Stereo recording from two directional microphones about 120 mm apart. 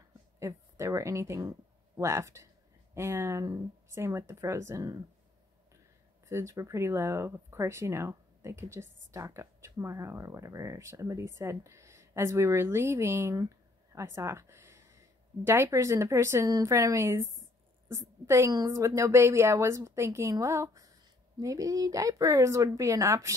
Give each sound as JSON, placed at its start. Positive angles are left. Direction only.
{"t": 0.4, "sound": "speech", "side_deg": -25}
{"t": 6.2, "sound": "a woman's voice", "side_deg": -25}